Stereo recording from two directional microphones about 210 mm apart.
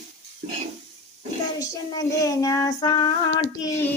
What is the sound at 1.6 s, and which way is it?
Female singing, 15° left (ahead or behind).